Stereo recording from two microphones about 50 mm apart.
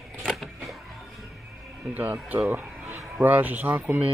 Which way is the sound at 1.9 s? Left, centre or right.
Right.